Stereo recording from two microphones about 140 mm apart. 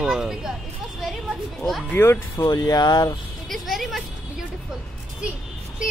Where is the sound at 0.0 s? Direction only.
5° right (ahead or behind).